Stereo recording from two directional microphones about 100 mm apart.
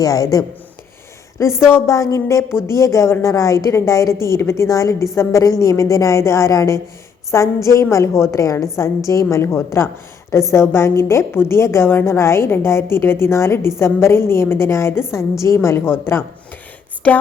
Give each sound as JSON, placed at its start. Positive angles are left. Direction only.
{"t": 0.0, "sound": "a woman's voice", "side_deg": 35}